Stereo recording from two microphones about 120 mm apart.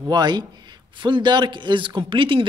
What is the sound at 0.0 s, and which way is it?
A man's voice, 35° right (ahead or behind).